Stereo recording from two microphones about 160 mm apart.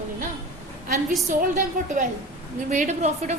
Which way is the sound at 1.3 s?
55° right (ahead or behind).